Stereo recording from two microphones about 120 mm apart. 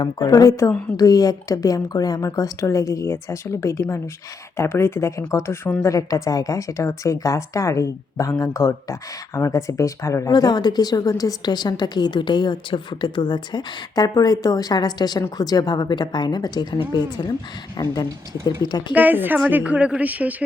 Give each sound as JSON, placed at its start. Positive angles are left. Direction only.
{"t": 0.0, "sound": "a woman's voice", "side_deg": 35}
{"t": 5.9, "sound": "speech", "side_deg": 30}
{"t": 18.9, "sound": "a woman's voice", "side_deg": -15}